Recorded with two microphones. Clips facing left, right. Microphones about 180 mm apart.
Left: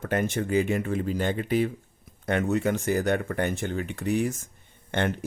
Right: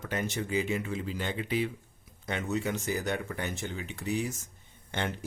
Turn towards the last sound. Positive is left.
turn(degrees=55)  # may be behind; listen again after turning